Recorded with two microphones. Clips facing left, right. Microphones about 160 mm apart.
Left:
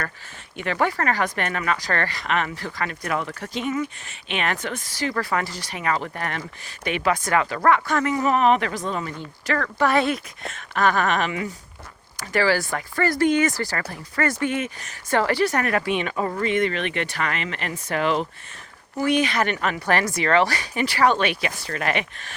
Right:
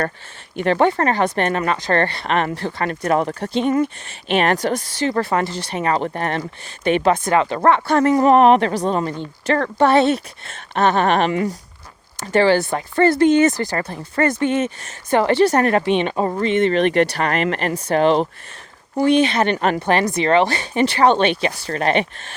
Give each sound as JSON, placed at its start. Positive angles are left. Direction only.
{"t": 0.6, "sound": "speech", "side_deg": -30}
{"t": 2.9, "sound": "speech", "side_deg": -40}
{"t": 17.8, "sound": "speech", "side_deg": -30}